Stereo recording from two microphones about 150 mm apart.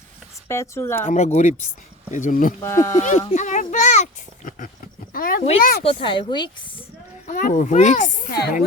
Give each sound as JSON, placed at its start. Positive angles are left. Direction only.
{"t": 0.4, "sound": "speech", "side_deg": 20}
{"t": 1.0, "sound": "a child's voice", "side_deg": 50}
{"t": 2.6, "sound": "speech", "side_deg": 20}
{"t": 3.0, "sound": "speech", "side_deg": 50}
{"t": 5.1, "sound": "speech", "side_deg": 70}
{"t": 5.8, "sound": "a woman's voice", "side_deg": 35}
{"t": 7.3, "sound": "a child's voice", "side_deg": 60}
{"t": 8.3, "sound": "speech", "side_deg": 90}